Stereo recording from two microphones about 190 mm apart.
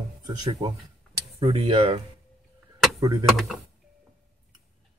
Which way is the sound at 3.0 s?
20° right (ahead or behind).